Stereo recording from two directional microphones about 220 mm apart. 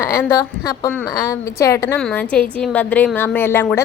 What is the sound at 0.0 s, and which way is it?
A woman's voice, 15° left (ahead or behind).